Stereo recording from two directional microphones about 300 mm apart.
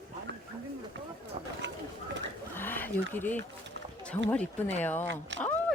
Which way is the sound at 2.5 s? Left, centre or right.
Centre.